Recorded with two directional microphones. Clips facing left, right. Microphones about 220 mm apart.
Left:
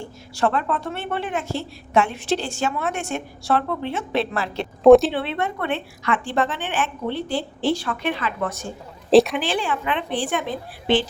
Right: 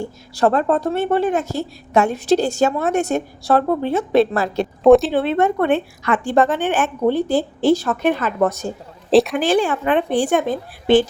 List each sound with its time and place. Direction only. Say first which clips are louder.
0.0 s a woman's voice: right 5 dB; 40° right (ahead or behind)
4.8 s speech: even; centre (ahead or behind)
5.1 s a woman's voice: right 8 dB; 45° right (ahead or behind)
9.0 s speech: even; centre (ahead or behind)
9.4 s a woman's voice: right 7 dB; 45° right (ahead or behind)